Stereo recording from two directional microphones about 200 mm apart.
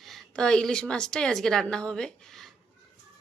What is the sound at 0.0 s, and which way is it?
A woman's voice, centre (ahead or behind).